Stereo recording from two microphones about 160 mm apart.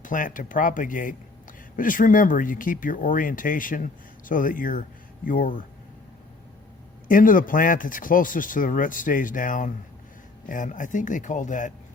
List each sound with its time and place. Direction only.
0.0 s speech: 55° left (ahead or behind)
7.1 s speech: 60° left (ahead or behind)